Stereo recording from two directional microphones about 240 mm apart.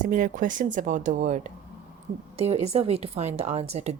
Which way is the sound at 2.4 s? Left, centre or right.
Right.